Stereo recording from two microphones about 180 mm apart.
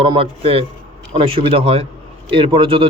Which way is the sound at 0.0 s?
30° right (ahead or behind).